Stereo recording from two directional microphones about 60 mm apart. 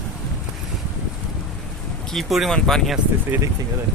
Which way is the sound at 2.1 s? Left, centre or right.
Centre.